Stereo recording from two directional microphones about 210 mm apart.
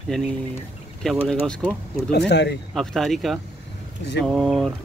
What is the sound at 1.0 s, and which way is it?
Speech, 5° left (ahead or behind).